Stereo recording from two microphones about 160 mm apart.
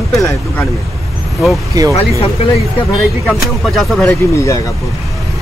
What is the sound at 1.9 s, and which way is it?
Speech, 35° left (ahead or behind).